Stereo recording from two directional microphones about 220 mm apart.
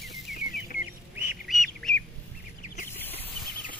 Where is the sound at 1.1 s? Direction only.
5° right (ahead or behind).